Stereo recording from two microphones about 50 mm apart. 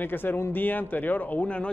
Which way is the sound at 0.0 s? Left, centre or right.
Left.